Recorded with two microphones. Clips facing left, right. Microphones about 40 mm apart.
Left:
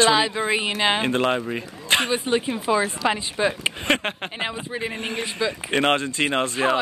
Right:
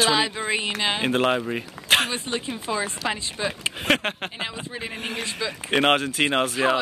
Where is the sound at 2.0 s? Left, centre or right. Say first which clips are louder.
Left 5 dB; centre.